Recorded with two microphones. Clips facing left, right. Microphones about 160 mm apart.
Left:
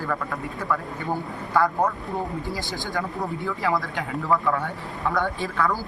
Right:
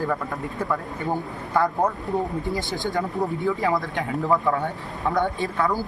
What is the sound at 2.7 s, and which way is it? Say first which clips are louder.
Speech: right 3 dB; 20° right (ahead or behind).